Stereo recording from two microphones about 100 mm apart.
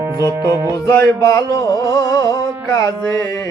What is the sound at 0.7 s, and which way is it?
Music, 30° left (ahead or behind).